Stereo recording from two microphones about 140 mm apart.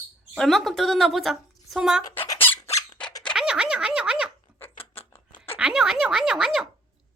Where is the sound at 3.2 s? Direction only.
5° left (ahead or behind).